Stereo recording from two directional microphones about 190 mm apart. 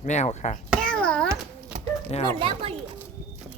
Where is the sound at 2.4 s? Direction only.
30° right (ahead or behind).